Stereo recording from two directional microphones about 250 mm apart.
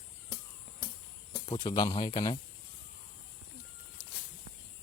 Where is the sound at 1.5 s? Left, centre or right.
Centre.